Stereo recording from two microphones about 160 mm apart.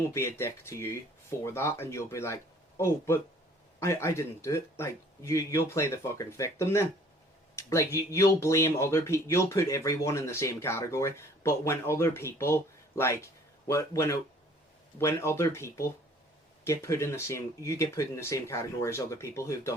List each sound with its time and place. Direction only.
0.1 s speech: 15° left (ahead or behind)